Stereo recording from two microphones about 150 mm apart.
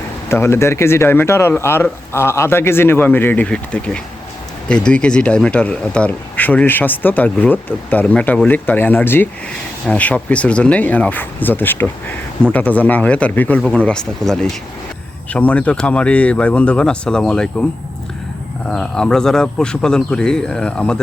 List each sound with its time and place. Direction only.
0.3 s speech: 15° left (ahead or behind)
18.7 s speech: 5° left (ahead or behind)